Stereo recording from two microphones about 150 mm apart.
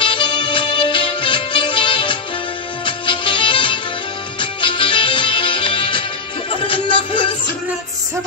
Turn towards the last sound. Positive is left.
turn(degrees=35)  # may be behind; listen again after turning